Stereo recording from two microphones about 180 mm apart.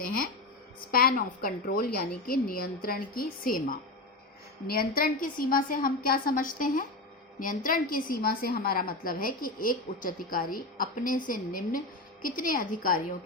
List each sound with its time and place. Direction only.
0.9 s a woman's voice: 55° left (ahead or behind)